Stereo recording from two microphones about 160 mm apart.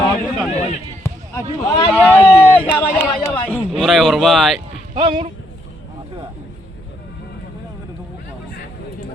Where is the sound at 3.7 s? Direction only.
Centre (ahead or behind).